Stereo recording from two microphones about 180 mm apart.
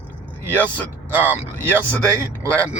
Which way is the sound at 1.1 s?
10° right (ahead or behind).